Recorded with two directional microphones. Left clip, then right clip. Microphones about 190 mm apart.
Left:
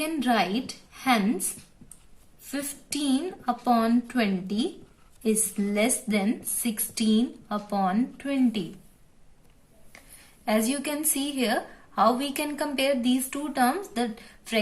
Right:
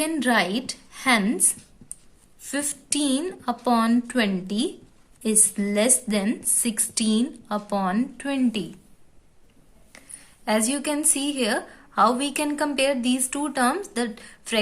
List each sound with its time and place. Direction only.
0.0 s a woman's voice: 40° right (ahead or behind)
10.4 s a woman's voice: 25° right (ahead or behind)